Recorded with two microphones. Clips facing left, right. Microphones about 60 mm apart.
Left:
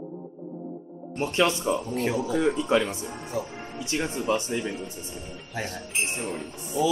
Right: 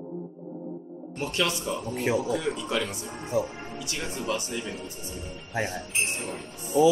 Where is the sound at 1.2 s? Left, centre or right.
Left.